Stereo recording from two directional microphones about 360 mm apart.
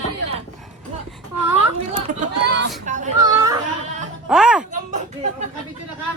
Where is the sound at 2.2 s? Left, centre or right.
Right.